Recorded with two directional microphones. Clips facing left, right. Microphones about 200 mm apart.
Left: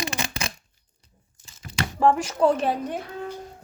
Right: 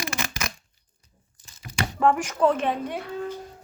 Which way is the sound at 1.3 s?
30° left (ahead or behind).